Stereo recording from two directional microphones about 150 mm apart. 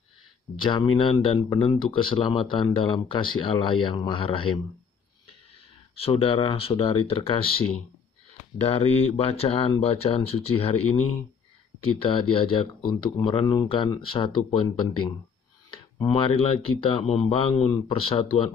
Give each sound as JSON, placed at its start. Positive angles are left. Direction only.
{"t": 0.6, "sound": "speech", "side_deg": 30}
{"t": 5.9, "sound": "speech", "side_deg": 40}